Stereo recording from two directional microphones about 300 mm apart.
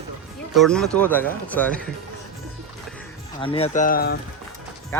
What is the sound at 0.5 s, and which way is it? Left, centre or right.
Speech, centre.